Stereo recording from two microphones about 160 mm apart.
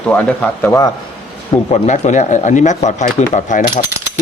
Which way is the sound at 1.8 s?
50° left (ahead or behind).